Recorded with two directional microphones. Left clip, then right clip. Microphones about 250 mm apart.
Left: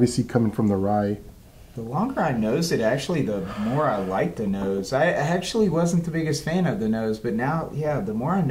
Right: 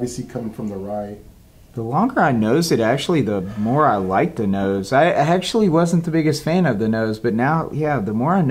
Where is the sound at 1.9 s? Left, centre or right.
Right.